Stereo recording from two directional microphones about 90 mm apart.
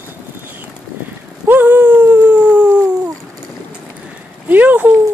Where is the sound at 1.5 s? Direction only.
20° right (ahead or behind).